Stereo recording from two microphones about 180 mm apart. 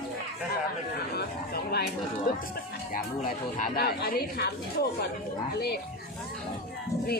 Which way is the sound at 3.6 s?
55° left (ahead or behind).